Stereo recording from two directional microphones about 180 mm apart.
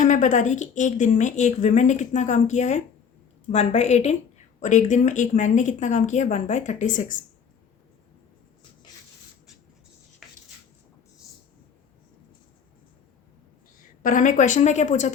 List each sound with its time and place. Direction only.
0.0 s a woman's voice: 45° left (ahead or behind)
10.2 s a sound: centre (ahead or behind)
14.0 s speech: 45° left (ahead or behind)